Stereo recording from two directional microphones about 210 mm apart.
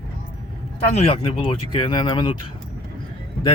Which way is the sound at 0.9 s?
30° left (ahead or behind).